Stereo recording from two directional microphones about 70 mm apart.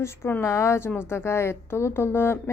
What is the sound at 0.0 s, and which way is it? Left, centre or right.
A woman's voice, left.